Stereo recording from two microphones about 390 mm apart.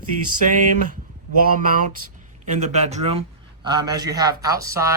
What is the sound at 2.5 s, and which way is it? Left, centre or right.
A man's voice, centre.